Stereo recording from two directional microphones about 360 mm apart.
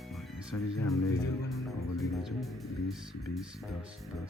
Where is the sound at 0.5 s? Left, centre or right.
Left.